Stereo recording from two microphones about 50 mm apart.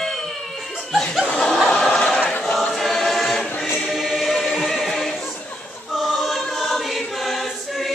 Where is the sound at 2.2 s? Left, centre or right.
Left.